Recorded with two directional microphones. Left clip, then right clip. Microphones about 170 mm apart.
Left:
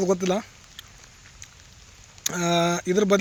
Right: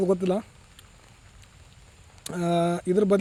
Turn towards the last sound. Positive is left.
turn(degrees=0)  # may be behind; listen again after turning